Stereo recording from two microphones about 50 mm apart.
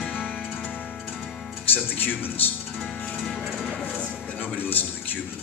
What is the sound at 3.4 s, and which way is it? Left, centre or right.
Music, centre.